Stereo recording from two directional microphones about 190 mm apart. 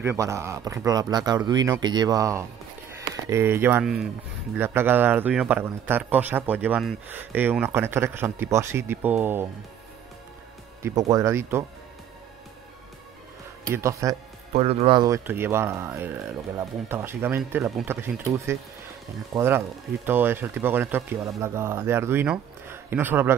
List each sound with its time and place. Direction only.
0.0 s speech: 15° right (ahead or behind)
10.8 s speech: 15° right (ahead or behind)
13.7 s speech: 15° right (ahead or behind)
14.5 s speech: 35° right (ahead or behind); by 23.3 s 10° right (ahead or behind)